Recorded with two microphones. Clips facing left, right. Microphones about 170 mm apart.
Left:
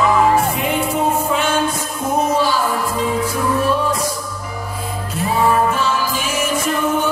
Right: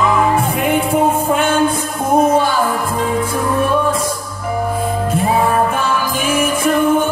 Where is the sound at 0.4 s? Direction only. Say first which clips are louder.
Right 3 dB; 55° right (ahead or behind).